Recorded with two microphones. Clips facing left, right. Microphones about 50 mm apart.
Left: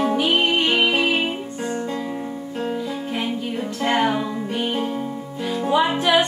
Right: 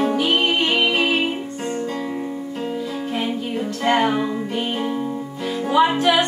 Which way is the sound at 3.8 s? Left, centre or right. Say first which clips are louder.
Right 2 dB; centre.